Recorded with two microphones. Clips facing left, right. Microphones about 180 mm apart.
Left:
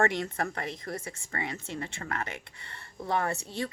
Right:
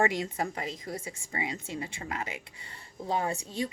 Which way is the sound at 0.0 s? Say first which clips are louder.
Even; 10° right (ahead or behind).